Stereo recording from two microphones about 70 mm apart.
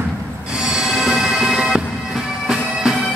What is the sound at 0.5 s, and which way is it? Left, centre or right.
Bagpipes, centre.